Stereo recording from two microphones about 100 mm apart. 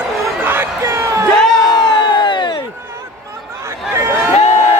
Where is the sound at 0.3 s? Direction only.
20° right (ahead or behind).